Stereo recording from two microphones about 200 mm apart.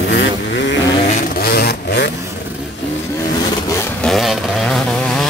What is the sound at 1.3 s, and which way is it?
Vehicle, 50° left (ahead or behind).